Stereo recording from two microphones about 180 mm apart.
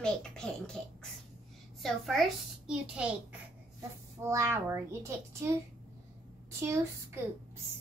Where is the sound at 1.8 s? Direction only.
Centre (ahead or behind).